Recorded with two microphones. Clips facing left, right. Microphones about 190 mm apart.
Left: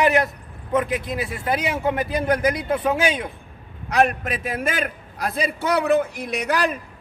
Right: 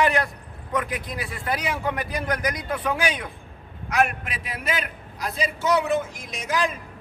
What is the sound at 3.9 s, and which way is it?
A man's voice, 35° left (ahead or behind).